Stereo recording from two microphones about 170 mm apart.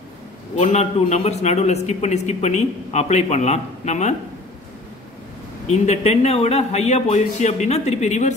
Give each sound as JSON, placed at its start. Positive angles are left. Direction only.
{"t": 0.6, "sound": "a man's voice", "side_deg": 40}
{"t": 5.7, "sound": "a man's voice", "side_deg": 40}